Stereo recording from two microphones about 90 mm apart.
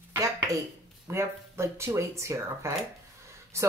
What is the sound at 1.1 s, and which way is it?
Speech, 30° right (ahead or behind).